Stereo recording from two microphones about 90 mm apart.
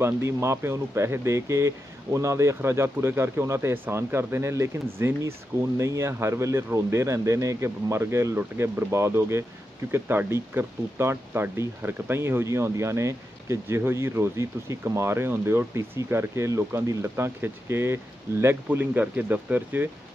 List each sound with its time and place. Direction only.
0.0 s speech: 30° right (ahead or behind)